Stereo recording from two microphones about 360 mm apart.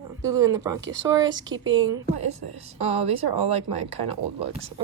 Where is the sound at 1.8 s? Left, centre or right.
Right.